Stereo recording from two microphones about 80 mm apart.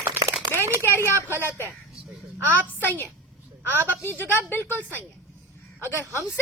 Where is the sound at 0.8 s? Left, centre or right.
Left.